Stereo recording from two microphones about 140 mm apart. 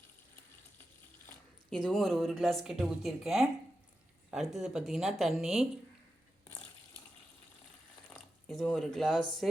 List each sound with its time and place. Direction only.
1.3 s speech: 5° left (ahead or behind)
8.4 s speech: 5° left (ahead or behind)